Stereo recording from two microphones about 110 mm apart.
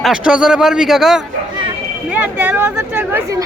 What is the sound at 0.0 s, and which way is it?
A man's voice, 5° right (ahead or behind).